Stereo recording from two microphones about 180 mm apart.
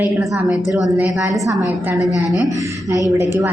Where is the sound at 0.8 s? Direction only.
Centre (ahead or behind).